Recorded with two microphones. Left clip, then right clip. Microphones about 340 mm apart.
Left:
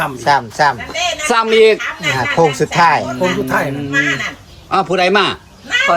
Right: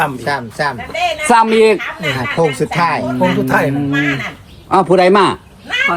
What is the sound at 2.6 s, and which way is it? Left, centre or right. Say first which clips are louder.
Speech: left 3 dB; left.